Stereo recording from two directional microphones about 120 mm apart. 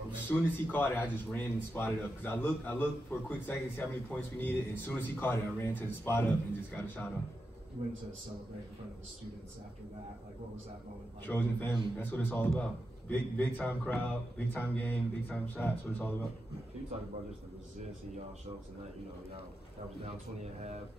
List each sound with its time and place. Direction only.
0.3 s a man's voice: 20° left (ahead or behind)
11.2 s a man's voice: 20° left (ahead or behind)